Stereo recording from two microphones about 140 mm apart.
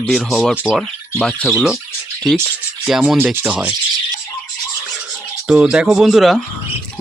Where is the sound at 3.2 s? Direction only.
15° right (ahead or behind).